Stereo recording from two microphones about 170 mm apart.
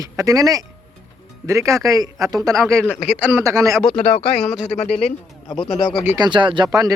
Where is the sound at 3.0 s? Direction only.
10° right (ahead or behind).